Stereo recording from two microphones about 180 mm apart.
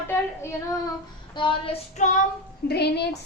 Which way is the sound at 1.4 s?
30° left (ahead or behind).